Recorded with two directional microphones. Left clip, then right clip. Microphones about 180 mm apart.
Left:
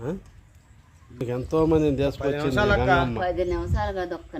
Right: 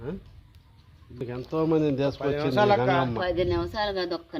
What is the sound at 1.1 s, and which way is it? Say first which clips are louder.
Speech: left 6 dB; 45° left (ahead or behind).